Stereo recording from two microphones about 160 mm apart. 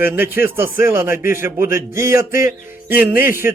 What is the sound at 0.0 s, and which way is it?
A man's voice, 10° right (ahead or behind).